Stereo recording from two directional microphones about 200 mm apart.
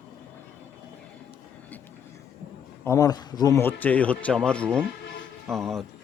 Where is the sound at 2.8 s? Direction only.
15° left (ahead or behind).